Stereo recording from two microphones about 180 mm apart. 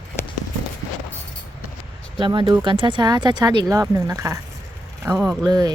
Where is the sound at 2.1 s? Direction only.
25° right (ahead or behind).